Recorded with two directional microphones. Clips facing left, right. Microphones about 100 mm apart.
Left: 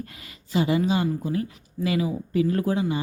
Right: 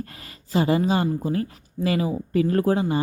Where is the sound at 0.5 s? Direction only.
40° right (ahead or behind).